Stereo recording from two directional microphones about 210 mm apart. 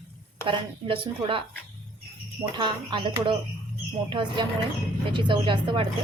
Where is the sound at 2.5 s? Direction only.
20° right (ahead or behind).